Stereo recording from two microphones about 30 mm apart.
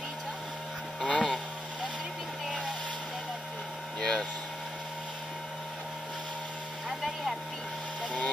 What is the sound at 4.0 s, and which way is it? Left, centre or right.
Vehicle, left.